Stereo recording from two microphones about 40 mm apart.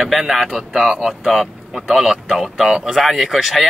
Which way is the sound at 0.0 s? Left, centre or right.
Centre.